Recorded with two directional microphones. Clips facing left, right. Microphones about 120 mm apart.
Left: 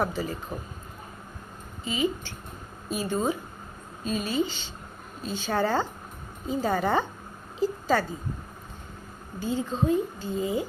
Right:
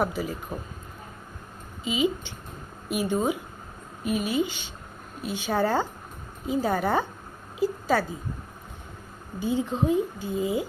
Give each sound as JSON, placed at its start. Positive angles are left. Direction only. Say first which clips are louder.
{"t": 0.0, "sound": "speech", "louder": "right 1 dB", "side_deg": -10}
{"t": 1.8, "sound": "a woman's voice", "louder": "right 2 dB", "side_deg": -15}
{"t": 9.4, "sound": "speech", "louder": "right 2 dB", "side_deg": -15}